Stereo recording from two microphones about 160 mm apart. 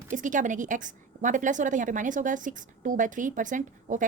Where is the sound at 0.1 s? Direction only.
55° right (ahead or behind).